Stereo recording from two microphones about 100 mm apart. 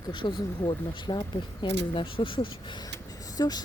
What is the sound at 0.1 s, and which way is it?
Speech, 55° left (ahead or behind).